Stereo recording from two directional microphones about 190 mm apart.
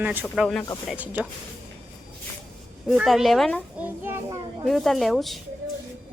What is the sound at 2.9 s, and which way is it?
Speech, centre (ahead or behind).